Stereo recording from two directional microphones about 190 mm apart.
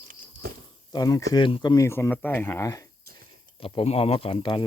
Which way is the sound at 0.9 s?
20° left (ahead or behind).